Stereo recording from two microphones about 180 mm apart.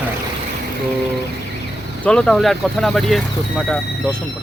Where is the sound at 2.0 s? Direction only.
5° left (ahead or behind).